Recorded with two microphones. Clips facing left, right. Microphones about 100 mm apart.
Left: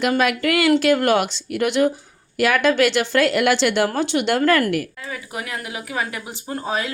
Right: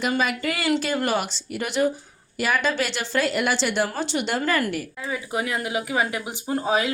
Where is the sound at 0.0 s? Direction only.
70° left (ahead or behind).